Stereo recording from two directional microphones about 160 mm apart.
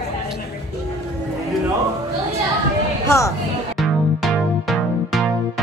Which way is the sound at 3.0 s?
20° left (ahead or behind).